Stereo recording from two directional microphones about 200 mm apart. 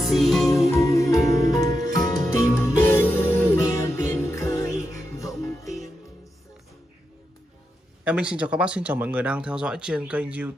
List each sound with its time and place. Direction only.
0.0 s music: centre (ahead or behind)
0.7 s music: 15° left (ahead or behind)
8.0 s speech: 5° right (ahead or behind)